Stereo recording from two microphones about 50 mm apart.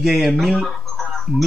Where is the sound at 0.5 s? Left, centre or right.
Centre.